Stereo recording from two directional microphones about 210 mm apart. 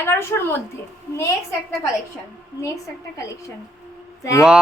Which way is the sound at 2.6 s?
15° left (ahead or behind).